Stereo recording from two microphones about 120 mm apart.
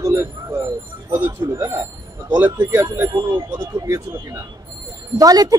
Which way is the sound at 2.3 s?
15° right (ahead or behind).